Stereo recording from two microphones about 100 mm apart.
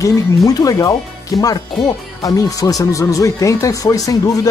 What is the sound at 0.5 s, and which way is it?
Speech, 35° left (ahead or behind).